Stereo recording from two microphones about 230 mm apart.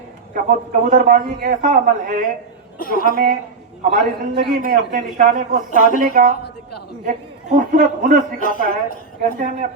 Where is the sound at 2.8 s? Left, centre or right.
Left.